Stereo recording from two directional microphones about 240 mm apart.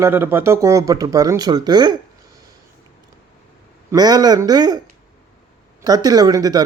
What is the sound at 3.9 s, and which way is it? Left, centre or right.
Speech, centre.